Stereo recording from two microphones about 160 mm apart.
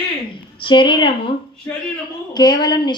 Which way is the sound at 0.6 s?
30° left (ahead or behind).